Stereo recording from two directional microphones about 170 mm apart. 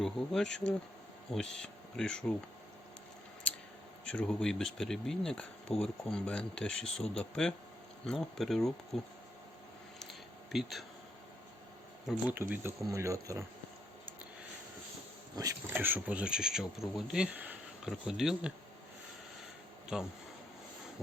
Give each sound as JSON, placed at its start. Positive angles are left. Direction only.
{"t": 0.0, "sound": "speech", "side_deg": 5}
{"t": 4.0, "sound": "speech", "side_deg": 5}
{"t": 10.0, "sound": "a sound", "side_deg": 0}
{"t": 12.0, "sound": "speech", "side_deg": -10}
{"t": 15.4, "sound": "speech", "side_deg": -15}
{"t": 19.9, "sound": "speech", "side_deg": -5}